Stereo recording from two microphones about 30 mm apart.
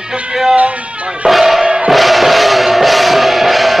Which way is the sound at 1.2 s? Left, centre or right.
Centre.